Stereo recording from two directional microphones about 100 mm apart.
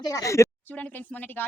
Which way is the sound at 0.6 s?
15° left (ahead or behind).